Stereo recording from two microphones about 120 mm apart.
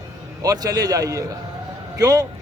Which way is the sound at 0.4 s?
30° right (ahead or behind).